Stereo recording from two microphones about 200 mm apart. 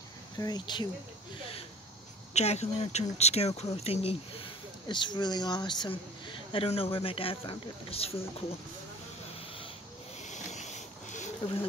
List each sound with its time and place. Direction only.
0.4 s speech: 20° left (ahead or behind)
2.3 s speech: 35° left (ahead or behind)
10.2 s a sound: 35° left (ahead or behind)